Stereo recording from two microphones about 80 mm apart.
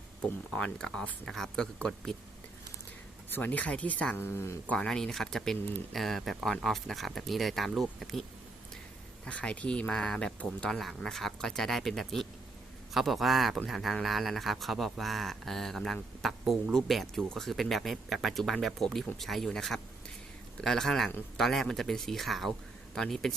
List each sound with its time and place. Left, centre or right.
0.6 s speech: centre
3.2 s speech: left
4.2 s speech: left
4.7 s speech: centre
9.2 s speech: centre